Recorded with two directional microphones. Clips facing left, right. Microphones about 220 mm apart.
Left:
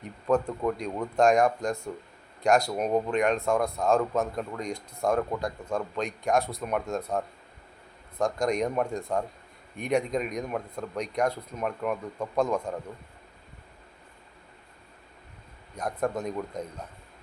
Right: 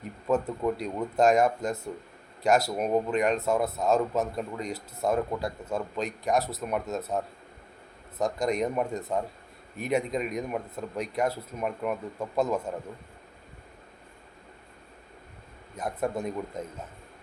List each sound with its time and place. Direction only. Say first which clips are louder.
0.3 s speech: left 1 dB; 5° right (ahead or behind)
8.2 s speech: left 1 dB; 5° right (ahead or behind)
15.7 s speech: left 1 dB; 5° right (ahead or behind)